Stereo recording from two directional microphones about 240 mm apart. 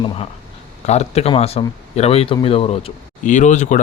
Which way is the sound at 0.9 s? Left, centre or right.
Left.